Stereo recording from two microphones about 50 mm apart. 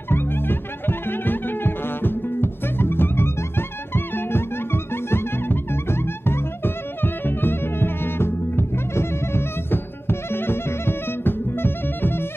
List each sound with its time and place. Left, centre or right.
0.1 s music: left